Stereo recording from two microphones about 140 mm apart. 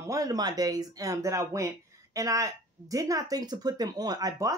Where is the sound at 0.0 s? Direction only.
25° right (ahead or behind).